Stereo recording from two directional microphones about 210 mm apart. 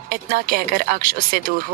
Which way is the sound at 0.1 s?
45° right (ahead or behind).